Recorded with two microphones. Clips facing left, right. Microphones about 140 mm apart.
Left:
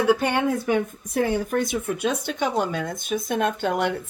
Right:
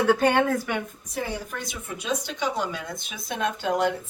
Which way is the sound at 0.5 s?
30° left (ahead or behind).